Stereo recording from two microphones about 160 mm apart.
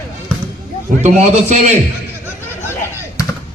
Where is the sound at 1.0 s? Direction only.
45° right (ahead or behind).